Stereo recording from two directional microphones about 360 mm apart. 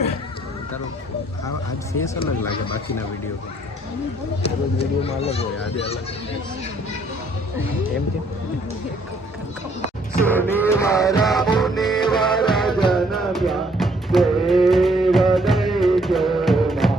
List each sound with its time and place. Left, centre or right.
2.1 s speech: centre
4.4 s speech: centre
10.2 s music: centre
10.7 s speech: centre
11.6 s music: centre